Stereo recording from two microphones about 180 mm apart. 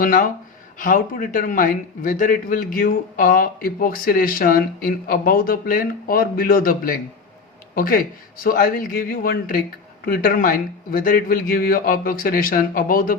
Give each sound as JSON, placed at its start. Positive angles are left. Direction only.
{"t": 0.0, "sound": "a man's voice", "side_deg": 50}